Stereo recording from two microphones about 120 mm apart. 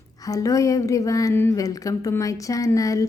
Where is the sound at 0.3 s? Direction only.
30° left (ahead or behind).